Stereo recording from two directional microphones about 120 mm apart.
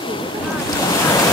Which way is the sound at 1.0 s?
30° left (ahead or behind).